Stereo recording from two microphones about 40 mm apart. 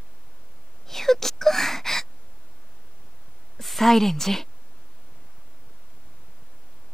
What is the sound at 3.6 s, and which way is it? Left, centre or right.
Speech, centre.